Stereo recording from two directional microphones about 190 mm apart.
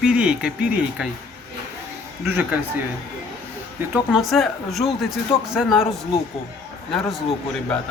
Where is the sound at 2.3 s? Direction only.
10° right (ahead or behind).